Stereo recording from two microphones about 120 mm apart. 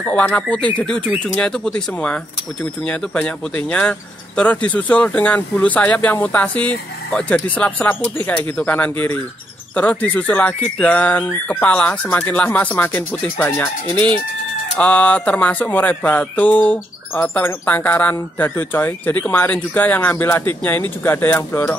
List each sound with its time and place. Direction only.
0.0 s speech: 10° left (ahead or behind)